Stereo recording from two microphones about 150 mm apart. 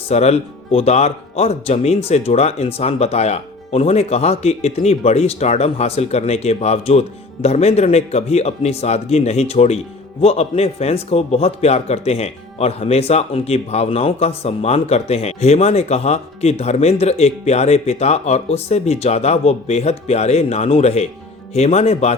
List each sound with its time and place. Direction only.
0.1 s speech: 45° left (ahead or behind)